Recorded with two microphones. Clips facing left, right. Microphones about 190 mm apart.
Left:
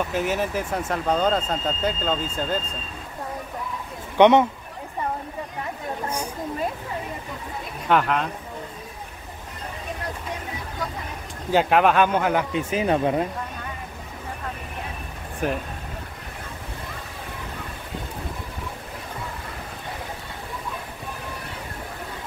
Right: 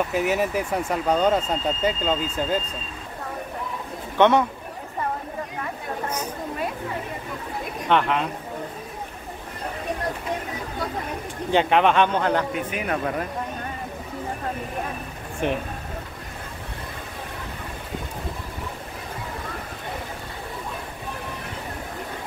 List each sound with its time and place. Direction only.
0.1 s speech: 5° right (ahead or behind)
4.2 s speech: 20° left (ahead or behind)
6.0 s speech: 10° left (ahead or behind)
7.9 s speech: centre (ahead or behind)
11.5 s speech: 5° left (ahead or behind)
12.5 s speech: 25° left (ahead or behind)
15.4 s speech: 5° left (ahead or behind)